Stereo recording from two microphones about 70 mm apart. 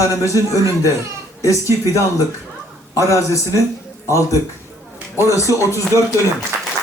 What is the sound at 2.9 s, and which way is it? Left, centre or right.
Speech, left.